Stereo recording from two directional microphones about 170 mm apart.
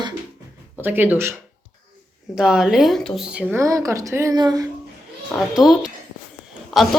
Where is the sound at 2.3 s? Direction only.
5° right (ahead or behind); by 4.7 s 20° right (ahead or behind).